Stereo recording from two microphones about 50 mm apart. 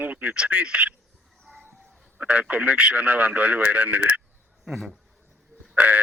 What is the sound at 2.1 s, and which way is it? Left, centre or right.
Speech, right.